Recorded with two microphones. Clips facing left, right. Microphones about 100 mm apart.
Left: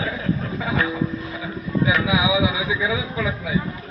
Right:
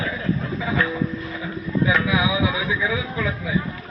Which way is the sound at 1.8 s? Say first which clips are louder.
Left 1 dB; 15° left (ahead or behind).